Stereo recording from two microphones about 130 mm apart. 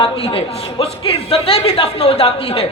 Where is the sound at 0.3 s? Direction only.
45° left (ahead or behind).